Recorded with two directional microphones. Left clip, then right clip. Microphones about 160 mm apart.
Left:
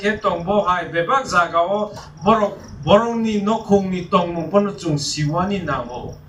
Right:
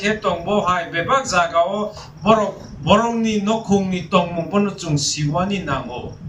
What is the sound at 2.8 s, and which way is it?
A man's voice, 30° right (ahead or behind).